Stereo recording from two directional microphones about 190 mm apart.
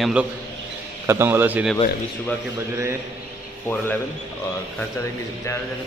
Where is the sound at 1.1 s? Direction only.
10° right (ahead or behind).